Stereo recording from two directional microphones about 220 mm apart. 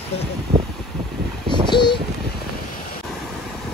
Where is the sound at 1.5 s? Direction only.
20° left (ahead or behind).